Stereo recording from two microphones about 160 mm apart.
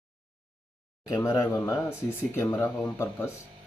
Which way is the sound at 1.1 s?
20° left (ahead or behind).